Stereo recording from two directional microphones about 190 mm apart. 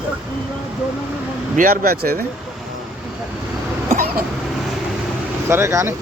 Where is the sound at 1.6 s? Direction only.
50° right (ahead or behind).